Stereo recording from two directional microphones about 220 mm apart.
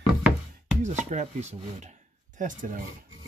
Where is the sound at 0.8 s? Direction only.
30° right (ahead or behind).